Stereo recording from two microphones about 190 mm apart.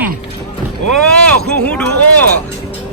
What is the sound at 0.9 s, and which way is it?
Speech, 5° left (ahead or behind).